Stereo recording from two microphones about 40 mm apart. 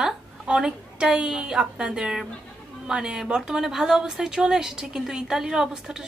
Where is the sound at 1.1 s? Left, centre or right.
Centre.